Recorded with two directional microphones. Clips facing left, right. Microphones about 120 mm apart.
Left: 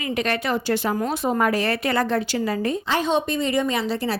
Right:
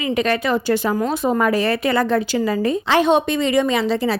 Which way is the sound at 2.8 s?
75° right (ahead or behind).